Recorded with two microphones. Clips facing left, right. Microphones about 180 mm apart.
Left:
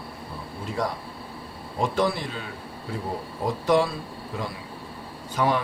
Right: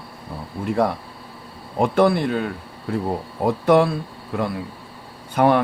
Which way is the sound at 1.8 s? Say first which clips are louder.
Right 7 dB; 60° right (ahead or behind).